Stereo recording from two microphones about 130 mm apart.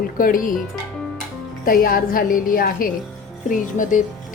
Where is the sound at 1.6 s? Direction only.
90° left.